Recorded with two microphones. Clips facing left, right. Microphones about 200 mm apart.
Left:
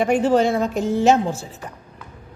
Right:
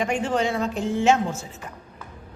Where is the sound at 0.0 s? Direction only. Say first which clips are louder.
Left 7 dB; 40° left (ahead or behind).